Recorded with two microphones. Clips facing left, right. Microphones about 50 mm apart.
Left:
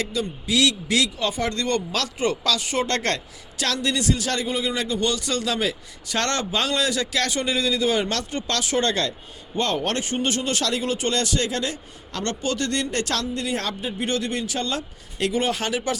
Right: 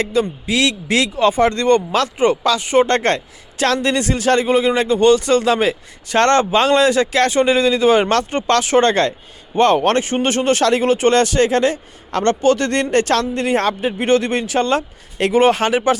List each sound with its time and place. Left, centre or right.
0.0 s speech: right